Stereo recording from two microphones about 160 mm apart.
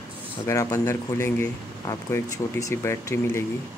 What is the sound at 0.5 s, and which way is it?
Speech, 20° left (ahead or behind).